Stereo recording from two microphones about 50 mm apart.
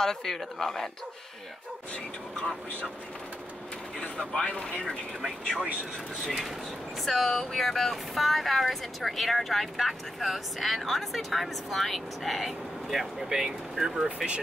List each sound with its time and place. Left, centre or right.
0.0 s speech: centre
4.0 s speech: centre
6.2 s speech: centre